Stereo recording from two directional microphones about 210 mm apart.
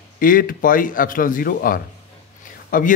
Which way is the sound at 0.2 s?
40° left (ahead or behind).